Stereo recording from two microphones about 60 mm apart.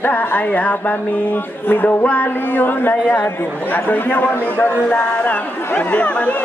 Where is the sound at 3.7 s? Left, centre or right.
Left.